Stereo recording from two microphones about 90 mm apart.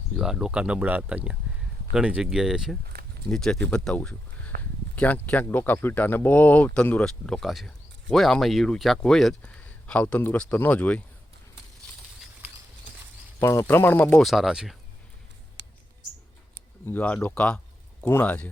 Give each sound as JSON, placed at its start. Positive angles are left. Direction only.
{"t": 0.2, "sound": "speech", "side_deg": -5}
{"t": 3.2, "sound": "speech", "side_deg": 5}
{"t": 9.4, "sound": "speech", "side_deg": 15}
{"t": 13.4, "sound": "speech", "side_deg": 30}
{"t": 14.2, "sound": "speech", "side_deg": 0}
{"t": 16.8, "sound": "speech", "side_deg": 20}